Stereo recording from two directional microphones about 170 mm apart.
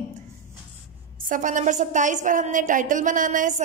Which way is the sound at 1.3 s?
50° right (ahead or behind).